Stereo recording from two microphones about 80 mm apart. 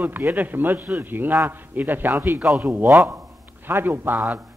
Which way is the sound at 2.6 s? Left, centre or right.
Right.